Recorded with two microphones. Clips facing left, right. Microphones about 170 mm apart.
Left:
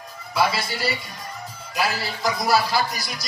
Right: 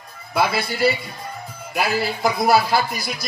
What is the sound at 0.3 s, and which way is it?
A man's voice, 55° right (ahead or behind).